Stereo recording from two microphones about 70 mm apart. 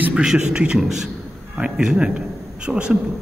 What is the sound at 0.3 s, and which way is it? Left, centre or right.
A man's voice, centre.